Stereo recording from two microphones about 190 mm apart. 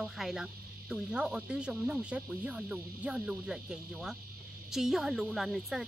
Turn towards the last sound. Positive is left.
turn(degrees=0)  # may be behind; listen again after turning